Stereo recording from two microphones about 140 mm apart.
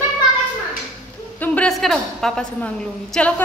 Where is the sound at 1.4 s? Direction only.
10° left (ahead or behind).